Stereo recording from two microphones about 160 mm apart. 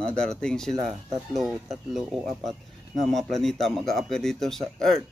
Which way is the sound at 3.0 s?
Centre (ahead or behind).